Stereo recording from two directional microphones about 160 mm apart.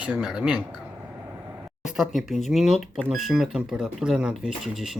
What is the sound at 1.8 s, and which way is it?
Speech, centre (ahead or behind).